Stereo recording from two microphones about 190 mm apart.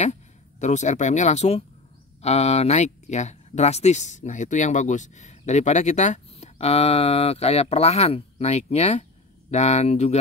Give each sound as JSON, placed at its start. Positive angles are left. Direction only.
{"t": 0.0, "sound": "speech", "side_deg": 35}